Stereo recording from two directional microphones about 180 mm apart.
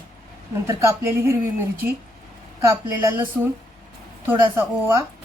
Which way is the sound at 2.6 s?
10° right (ahead or behind).